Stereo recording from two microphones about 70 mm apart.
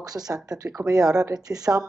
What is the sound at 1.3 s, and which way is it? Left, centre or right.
Speech, right.